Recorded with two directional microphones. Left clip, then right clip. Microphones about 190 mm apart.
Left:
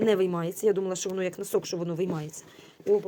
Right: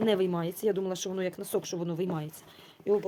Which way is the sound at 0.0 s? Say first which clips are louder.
Left 3 dB; 10° right (ahead or behind).